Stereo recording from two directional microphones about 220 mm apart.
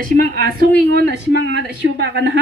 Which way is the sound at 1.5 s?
50° right (ahead or behind).